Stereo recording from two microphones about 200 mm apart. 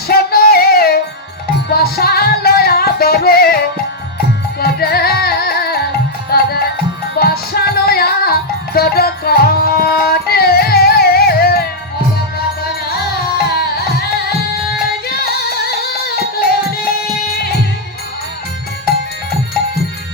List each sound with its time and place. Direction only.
0.1 s music: 50° left (ahead or behind)
4.6 s music: 50° left (ahead or behind)
13.5 s music: 50° left (ahead or behind)
14.8 s music: 50° left (ahead or behind)